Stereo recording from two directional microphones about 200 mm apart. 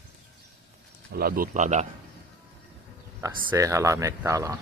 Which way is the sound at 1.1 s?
45° right (ahead or behind).